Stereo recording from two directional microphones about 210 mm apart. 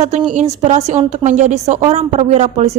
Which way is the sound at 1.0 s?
35° right (ahead or behind).